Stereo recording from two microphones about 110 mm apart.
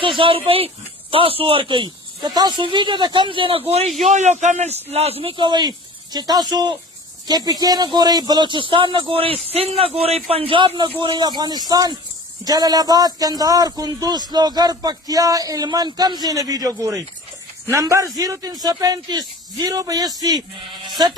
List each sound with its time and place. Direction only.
0.2 s a man's voice: 55° right (ahead or behind)
3.7 s speech: 80° right
4.9 s a man's voice: 70° right (ahead or behind)
11.0 s a man's voice: 40° right (ahead or behind)
20.8 s music: 40° right (ahead or behind)